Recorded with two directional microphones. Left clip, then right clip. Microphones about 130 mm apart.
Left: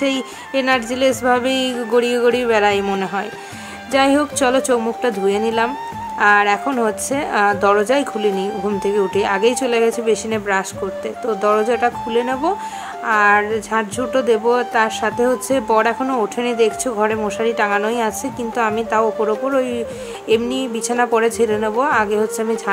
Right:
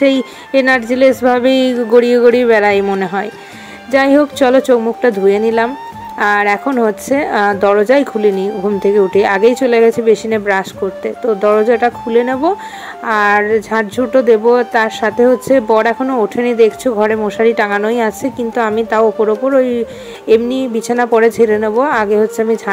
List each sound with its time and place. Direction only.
0.5 s a woman's voice: 35° right (ahead or behind)